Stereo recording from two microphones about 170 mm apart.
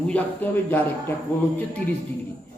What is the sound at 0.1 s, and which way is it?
A man's voice, 10° left (ahead or behind).